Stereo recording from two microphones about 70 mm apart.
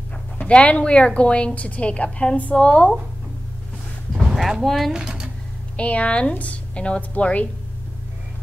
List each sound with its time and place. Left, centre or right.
0.4 s a woman's voice: centre
4.1 s speech: centre
4.9 s a sound: centre
5.8 s speech: centre